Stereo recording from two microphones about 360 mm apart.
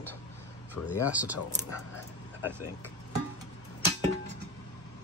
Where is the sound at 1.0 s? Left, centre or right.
Centre.